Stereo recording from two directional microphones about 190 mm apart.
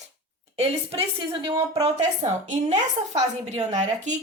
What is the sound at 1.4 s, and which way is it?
A woman's voice, 30° right (ahead or behind).